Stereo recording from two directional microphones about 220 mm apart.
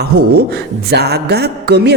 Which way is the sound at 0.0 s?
45° right (ahead or behind).